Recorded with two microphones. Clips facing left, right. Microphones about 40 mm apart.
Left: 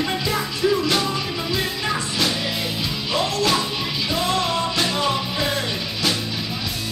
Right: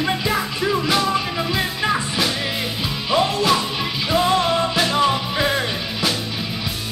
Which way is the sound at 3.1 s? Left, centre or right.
Centre.